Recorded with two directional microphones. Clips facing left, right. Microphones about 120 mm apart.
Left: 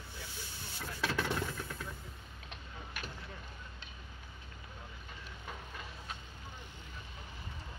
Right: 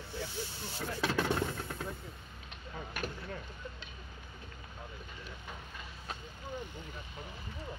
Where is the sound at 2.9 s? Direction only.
50° right (ahead or behind).